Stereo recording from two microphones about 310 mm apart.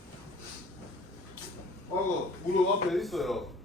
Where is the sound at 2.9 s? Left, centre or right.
Centre.